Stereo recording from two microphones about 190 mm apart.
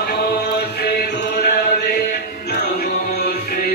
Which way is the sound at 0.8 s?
55° left (ahead or behind).